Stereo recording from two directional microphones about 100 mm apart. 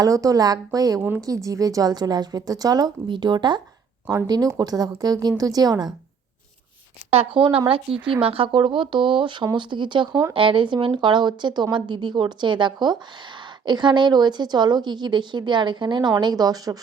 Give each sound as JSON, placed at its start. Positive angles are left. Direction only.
{"t": 0.0, "sound": "a woman's voice", "side_deg": -35}
{"t": 7.1, "sound": "speech", "side_deg": -75}
{"t": 7.9, "sound": "speech", "side_deg": -5}
{"t": 8.2, "sound": "a woman's voice", "side_deg": -65}
{"t": 10.3, "sound": "a woman's voice", "side_deg": -60}
{"t": 16.2, "sound": "a woman's voice", "side_deg": -40}